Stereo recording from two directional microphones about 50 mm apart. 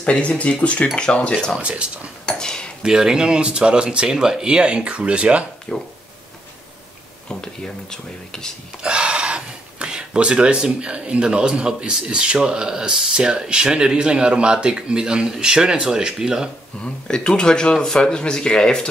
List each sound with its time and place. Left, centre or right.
0.0 s speech: left
1.6 s speech: right
2.2 s dishes: centre
2.8 s speech: centre
5.7 s speech: left
7.2 s speech: centre
8.8 s speech: centre
16.8 s speech: centre